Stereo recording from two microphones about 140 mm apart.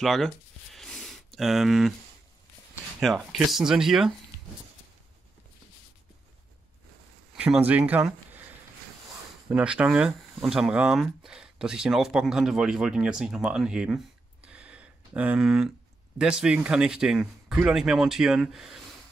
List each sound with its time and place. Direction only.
0.0 s speech: centre (ahead or behind)
0.7 s a sound: 5° left (ahead or behind)
3.0 s speech: centre (ahead or behind)
7.3 s speech: 10° right (ahead or behind)
9.5 s speech: 10° right (ahead or behind)